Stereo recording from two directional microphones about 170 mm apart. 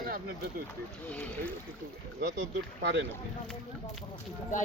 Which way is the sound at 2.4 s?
90° right.